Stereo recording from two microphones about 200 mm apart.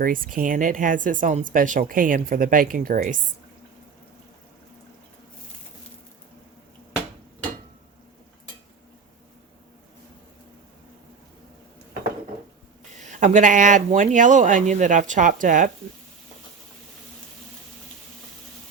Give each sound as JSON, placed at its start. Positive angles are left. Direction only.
{"t": 0.0, "sound": "speech", "side_deg": -45}
{"t": 13.0, "sound": "speech", "side_deg": -40}